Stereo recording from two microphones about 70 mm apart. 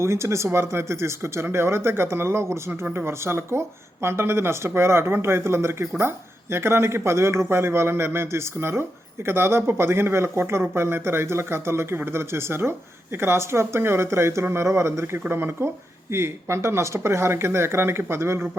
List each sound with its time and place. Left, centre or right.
0.0 s speech: right